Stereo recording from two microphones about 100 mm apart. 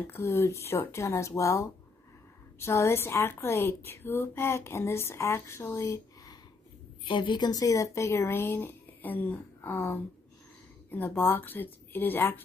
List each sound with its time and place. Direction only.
0.0 s a woman's voice: 25° left (ahead or behind)
7.1 s a woman's voice: 50° left (ahead or behind); by 12.4 s 20° left (ahead or behind)